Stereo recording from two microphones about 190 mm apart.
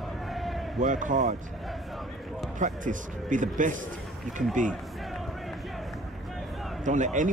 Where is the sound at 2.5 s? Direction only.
45° right (ahead or behind).